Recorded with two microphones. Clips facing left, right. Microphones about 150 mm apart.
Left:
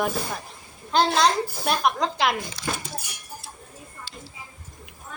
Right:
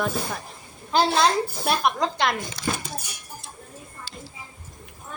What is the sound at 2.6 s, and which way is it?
Speech, 60° right (ahead or behind).